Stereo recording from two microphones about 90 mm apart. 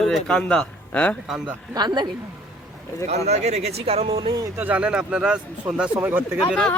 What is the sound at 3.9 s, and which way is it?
Speech, 90° right.